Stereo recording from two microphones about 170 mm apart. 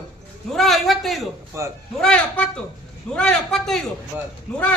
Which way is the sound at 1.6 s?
15° right (ahead or behind).